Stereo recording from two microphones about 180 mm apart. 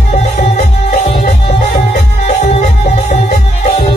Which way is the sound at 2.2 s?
40° left (ahead or behind).